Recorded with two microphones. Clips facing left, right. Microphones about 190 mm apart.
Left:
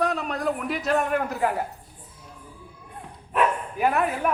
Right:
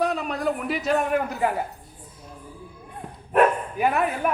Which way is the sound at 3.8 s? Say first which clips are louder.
Even; centre (ahead or behind).